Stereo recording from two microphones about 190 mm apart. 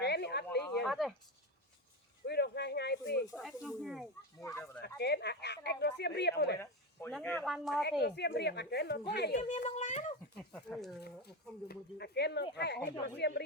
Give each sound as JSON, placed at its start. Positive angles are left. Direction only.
{"t": 0.0, "sound": "a sound", "side_deg": 60}
{"t": 0.8, "sound": "a sound", "side_deg": 0}
{"t": 2.2, "sound": "a sound", "side_deg": 60}
{"t": 3.3, "sound": "speech", "side_deg": 0}
{"t": 4.4, "sound": "speech", "side_deg": 15}
{"t": 4.8, "sound": "speech", "side_deg": 60}
{"t": 7.1, "sound": "speech", "side_deg": 5}
{"t": 8.0, "sound": "speech", "side_deg": 60}
{"t": 9.4, "sound": "speech", "side_deg": 35}
{"t": 10.5, "sound": "speech", "side_deg": 0}
{"t": 11.7, "sound": "speech", "side_deg": 60}